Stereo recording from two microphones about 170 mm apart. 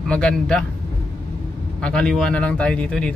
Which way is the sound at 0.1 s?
5° left (ahead or behind).